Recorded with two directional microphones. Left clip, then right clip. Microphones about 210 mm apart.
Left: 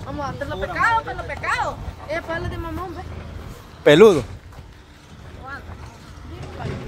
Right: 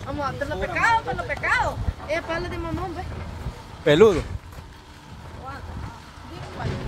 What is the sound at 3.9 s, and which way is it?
Speech, 45° left (ahead or behind).